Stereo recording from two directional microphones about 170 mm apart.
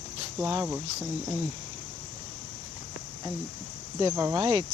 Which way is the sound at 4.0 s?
20° right (ahead or behind).